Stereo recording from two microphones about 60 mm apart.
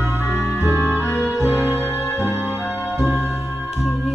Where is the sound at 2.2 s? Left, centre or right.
Right.